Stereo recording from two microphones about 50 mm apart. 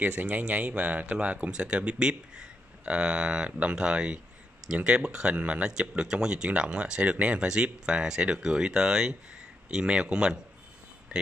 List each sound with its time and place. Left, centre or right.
0.0 s speech: right; by 10.4 s centre